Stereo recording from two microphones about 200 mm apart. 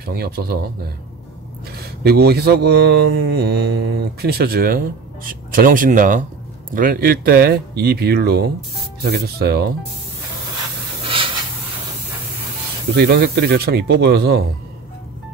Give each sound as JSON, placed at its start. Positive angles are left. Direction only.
{"t": 0.0, "sound": "mantra", "side_deg": -50}
{"t": 2.0, "sound": "mantra", "side_deg": -55}
{"t": 11.0, "sound": "a sound", "side_deg": -25}
{"t": 12.9, "sound": "mantra", "side_deg": -55}